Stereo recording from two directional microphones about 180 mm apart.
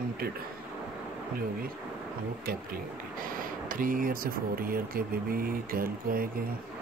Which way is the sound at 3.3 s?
50° right (ahead or behind).